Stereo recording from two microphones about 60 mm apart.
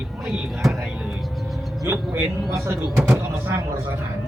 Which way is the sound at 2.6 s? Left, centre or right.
Right.